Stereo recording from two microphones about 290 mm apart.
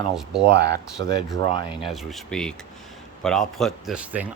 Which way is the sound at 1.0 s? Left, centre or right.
Right.